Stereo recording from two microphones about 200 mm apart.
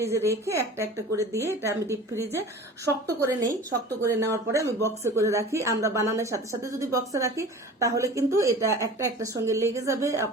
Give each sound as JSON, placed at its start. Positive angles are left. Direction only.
{"t": 0.0, "sound": "speech", "side_deg": -15}